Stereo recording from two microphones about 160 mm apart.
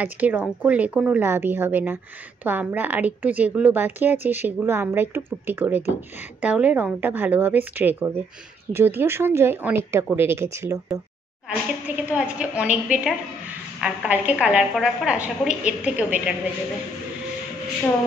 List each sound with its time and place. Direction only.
0.0 s a woman's voice: 10° right (ahead or behind)
12.1 s a woman's voice: 10° right (ahead or behind)